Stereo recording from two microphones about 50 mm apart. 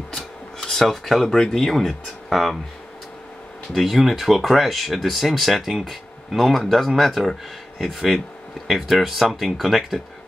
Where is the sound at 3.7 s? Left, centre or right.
Centre.